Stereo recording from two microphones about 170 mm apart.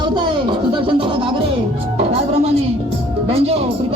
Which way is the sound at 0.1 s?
25° right (ahead or behind).